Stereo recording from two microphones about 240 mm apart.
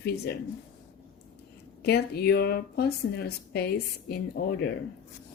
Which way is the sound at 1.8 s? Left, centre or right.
Left.